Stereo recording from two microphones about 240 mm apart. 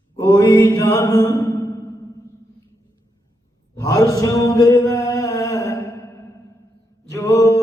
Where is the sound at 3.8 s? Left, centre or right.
Centre.